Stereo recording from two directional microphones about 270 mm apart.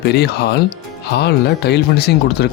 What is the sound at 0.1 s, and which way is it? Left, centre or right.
Speech, left.